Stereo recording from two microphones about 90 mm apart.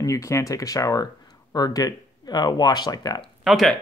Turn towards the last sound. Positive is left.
turn(degrees=0)  # may be behind; listen again after turning